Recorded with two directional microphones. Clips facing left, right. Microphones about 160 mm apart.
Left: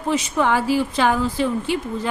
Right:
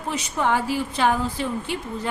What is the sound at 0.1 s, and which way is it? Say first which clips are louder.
A woman's voice: left 4 dB; 90° left.